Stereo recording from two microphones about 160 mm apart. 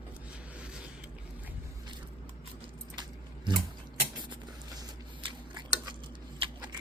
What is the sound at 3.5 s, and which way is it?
Mechanisms, 30° right (ahead or behind).